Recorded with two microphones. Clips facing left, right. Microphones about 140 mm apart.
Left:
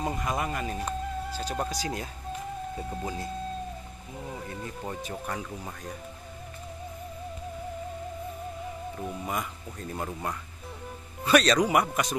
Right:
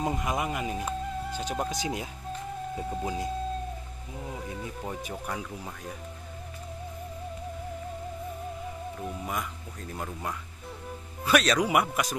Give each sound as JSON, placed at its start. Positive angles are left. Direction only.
{"t": 0.0, "sound": "speech", "side_deg": -10}
{"t": 1.3, "sound": "speech", "side_deg": -15}
{"t": 2.7, "sound": "speech", "side_deg": -5}
{"t": 4.3, "sound": "speech", "side_deg": -5}
{"t": 9.0, "sound": "speech", "side_deg": 0}
{"t": 11.2, "sound": "speech", "side_deg": 0}